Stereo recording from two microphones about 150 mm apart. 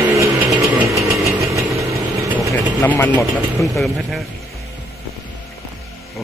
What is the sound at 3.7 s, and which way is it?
Speech, centre (ahead or behind).